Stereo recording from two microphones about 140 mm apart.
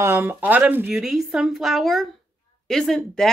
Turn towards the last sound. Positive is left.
turn(degrees=0)  # may be behind; listen again after turning